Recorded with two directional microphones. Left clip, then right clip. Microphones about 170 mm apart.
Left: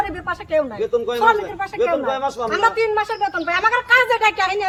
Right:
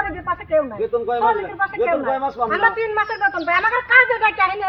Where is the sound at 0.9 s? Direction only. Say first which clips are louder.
Left 2 dB; 20° right (ahead or behind).